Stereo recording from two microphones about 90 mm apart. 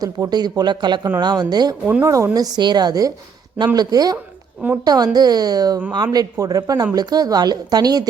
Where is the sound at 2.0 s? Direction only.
35° right (ahead or behind).